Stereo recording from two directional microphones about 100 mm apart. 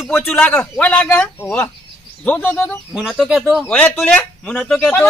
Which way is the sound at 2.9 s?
5° right (ahead or behind).